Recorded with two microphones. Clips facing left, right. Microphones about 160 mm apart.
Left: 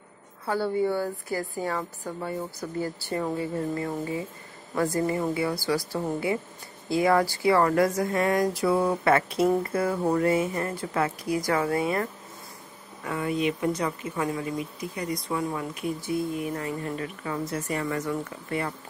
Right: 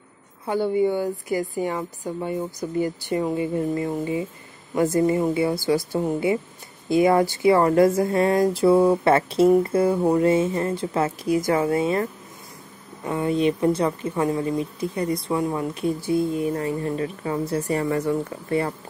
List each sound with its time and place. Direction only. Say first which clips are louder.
0.5 s a woman's voice: right 4 dB; 15° right (ahead or behind); by 18.7 s 30° right (ahead or behind)